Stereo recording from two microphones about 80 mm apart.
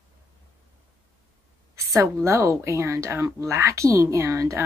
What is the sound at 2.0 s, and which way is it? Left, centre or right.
Speech, right.